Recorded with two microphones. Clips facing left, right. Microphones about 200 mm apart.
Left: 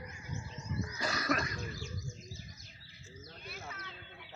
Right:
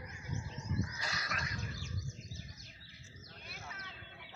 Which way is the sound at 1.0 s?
50° left (ahead or behind).